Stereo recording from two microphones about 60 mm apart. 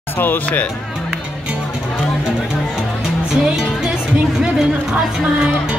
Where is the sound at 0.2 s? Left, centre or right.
Left.